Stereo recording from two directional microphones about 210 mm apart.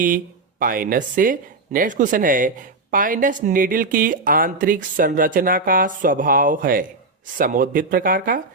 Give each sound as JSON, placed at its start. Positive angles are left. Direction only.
{"t": 0.6, "sound": "speech", "side_deg": -40}